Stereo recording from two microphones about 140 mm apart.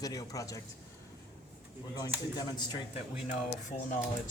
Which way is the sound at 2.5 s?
30° left (ahead or behind).